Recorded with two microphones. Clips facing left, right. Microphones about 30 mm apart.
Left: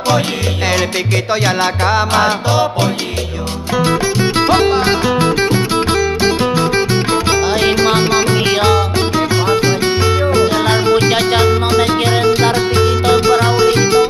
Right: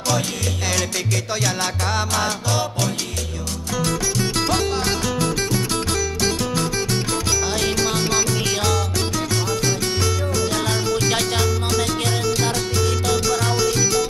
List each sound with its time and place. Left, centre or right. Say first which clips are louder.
1.3 s music: left 10 dB; left